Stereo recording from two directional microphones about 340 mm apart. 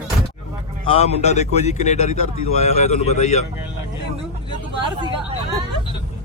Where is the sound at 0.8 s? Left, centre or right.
Centre.